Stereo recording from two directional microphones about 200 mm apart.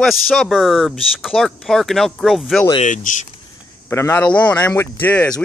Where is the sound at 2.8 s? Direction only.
40° left (ahead or behind).